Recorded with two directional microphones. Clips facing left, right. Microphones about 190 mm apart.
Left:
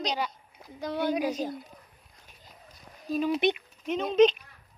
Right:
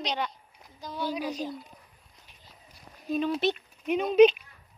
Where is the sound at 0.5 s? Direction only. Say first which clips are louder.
Left 6 dB; 60° left (ahead or behind).